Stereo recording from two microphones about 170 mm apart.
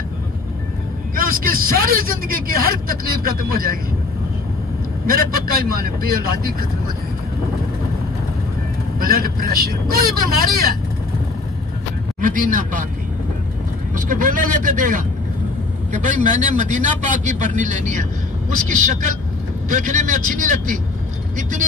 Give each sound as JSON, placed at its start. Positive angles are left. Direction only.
{"t": 1.1, "sound": "speech", "side_deg": -55}
{"t": 5.0, "sound": "speech", "side_deg": -60}
{"t": 9.0, "sound": "speech", "side_deg": -60}
{"t": 12.2, "sound": "a man's voice", "side_deg": -50}
{"t": 13.9, "sound": "a man's voice", "side_deg": -50}